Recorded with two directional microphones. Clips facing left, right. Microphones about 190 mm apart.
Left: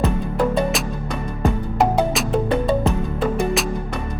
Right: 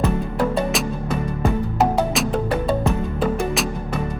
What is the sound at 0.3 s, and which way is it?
Music, 5° right (ahead or behind).